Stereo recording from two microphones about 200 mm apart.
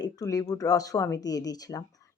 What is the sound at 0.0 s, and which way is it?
A woman's voice, 15° left (ahead or behind).